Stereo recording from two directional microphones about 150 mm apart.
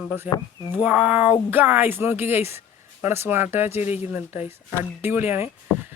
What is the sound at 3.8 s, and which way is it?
Speech, 45° left (ahead or behind).